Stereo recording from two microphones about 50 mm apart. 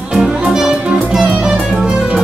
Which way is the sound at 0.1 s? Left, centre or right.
Centre.